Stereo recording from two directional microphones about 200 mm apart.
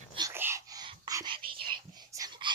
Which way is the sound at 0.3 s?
10° right (ahead or behind).